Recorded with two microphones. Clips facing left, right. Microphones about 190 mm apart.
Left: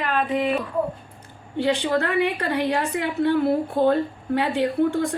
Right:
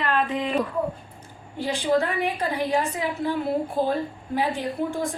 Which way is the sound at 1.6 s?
65° left (ahead or behind).